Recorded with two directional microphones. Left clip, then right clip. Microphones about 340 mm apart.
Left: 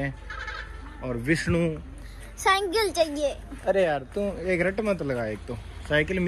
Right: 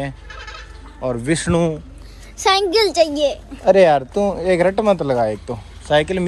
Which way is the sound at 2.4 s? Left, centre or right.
Right.